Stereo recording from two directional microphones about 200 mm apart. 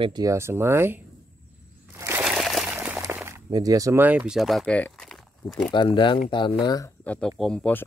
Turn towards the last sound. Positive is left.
turn(degrees=5)  # may be behind; listen again after turning